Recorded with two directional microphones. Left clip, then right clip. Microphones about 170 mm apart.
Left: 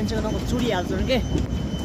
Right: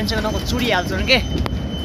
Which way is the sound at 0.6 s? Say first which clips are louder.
Right 5 dB; 20° left (ahead or behind).